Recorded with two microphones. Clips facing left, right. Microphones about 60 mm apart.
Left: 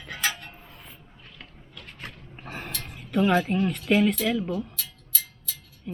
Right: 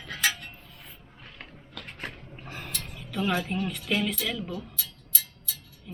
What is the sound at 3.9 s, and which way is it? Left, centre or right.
Speech, centre.